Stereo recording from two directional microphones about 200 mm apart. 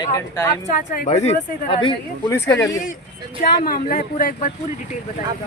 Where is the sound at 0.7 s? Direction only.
45° left (ahead or behind); by 1.9 s 25° left (ahead or behind).